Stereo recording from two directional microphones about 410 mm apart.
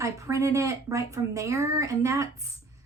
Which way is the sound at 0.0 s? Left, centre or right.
Centre.